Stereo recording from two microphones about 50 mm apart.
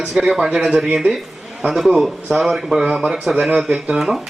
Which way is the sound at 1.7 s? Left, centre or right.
Centre.